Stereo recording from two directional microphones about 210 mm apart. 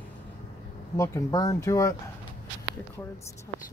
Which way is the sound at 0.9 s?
15° left (ahead or behind).